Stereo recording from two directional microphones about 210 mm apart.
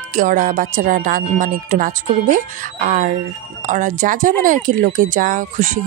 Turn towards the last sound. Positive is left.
turn(degrees=-35)  # may be behind; listen again after turning